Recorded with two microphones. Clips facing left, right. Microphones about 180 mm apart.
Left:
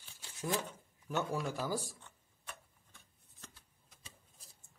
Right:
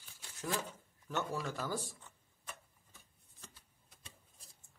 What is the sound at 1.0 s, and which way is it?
Speech, 10° left (ahead or behind).